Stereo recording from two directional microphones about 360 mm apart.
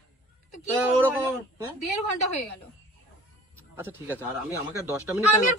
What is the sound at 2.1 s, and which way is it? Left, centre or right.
Speech, left.